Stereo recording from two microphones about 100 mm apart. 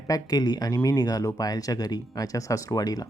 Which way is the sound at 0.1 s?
40° left (ahead or behind).